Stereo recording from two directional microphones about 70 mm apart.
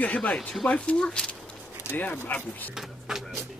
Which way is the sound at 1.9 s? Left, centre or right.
Left.